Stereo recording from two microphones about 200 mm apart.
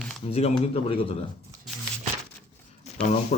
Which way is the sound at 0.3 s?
30° left (ahead or behind).